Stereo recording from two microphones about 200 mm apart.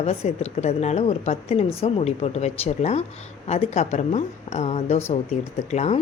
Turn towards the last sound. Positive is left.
turn(degrees=35)  # may be behind; listen again after turning